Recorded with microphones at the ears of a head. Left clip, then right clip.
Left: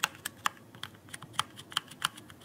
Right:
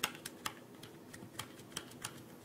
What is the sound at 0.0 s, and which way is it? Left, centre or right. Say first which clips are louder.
Computer keyboard: left 8 dB; left.